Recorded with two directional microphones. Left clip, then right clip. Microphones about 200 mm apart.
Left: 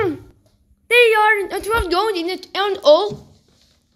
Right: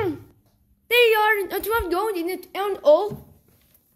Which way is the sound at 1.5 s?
10° right (ahead or behind).